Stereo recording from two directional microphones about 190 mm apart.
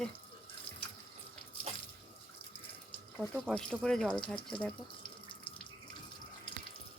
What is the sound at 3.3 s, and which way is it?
Speech, centre (ahead or behind).